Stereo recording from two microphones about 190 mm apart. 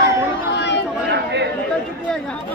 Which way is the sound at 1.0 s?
65° right (ahead or behind).